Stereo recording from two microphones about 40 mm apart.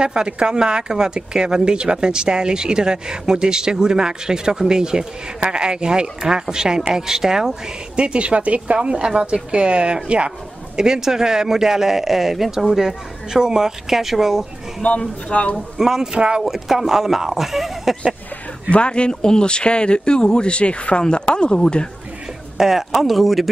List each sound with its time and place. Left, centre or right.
0.0 s speech: right
8.0 s speech: right
8.7 s speech: right
10.8 s speech: centre
14.8 s speech: left
15.8 s speech: centre
16.4 s speech: centre
18.7 s speech: left
22.6 s speech: centre